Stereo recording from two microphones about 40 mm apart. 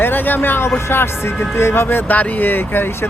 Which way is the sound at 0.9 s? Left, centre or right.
Left.